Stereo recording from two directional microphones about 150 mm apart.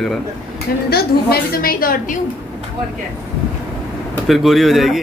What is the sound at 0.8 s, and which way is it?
A woman's voice, 90° left.